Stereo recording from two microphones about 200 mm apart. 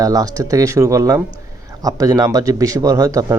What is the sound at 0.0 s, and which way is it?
Speech, 15° right (ahead or behind).